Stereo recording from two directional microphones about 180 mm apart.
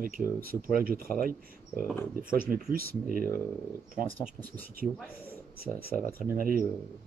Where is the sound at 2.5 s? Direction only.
50° right (ahead or behind).